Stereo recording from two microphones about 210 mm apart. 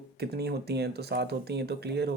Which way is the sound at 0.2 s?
50° right (ahead or behind).